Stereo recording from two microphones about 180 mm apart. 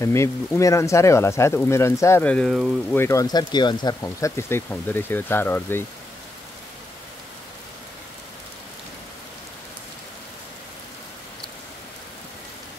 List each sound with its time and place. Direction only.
0.0 s speech: 15° left (ahead or behind)
3.0 s speech: 15° left (ahead or behind)